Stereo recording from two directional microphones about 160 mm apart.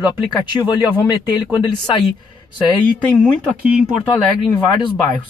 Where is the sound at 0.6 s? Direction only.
25° left (ahead or behind).